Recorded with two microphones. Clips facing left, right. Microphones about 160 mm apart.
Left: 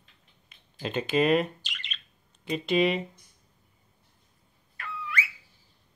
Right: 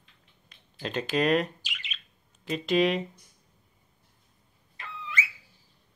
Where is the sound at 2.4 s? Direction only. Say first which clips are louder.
Even; centre (ahead or behind).